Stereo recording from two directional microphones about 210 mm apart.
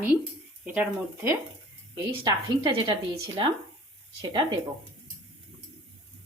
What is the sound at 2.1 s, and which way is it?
Speech, 25° right (ahead or behind).